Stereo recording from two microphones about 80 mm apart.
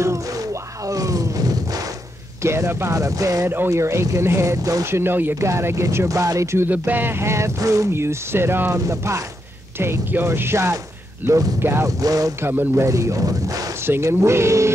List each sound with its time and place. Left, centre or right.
0.0 s a sound: right
2.4 s speech: right
2.9 s speech: right
3.4 s speech: right
3.7 s speech: right
5.0 s speech: right
6.9 s speech: right
7.9 s speech: right
8.7 s speech: right
9.8 s speech: right
12.0 s speech: right
12.4 s speech: right
12.8 s speech: right
13.8 s speech: right